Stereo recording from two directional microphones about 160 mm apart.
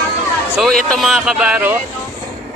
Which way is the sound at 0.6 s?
5° left (ahead or behind).